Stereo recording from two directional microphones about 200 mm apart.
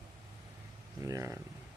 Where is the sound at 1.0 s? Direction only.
15° right (ahead or behind).